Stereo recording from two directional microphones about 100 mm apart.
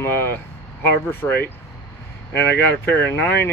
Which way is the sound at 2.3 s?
20° left (ahead or behind).